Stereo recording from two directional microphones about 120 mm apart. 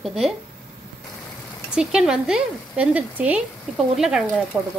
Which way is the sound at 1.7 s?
5° right (ahead or behind).